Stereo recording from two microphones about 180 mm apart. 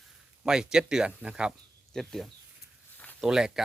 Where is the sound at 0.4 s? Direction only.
5° right (ahead or behind).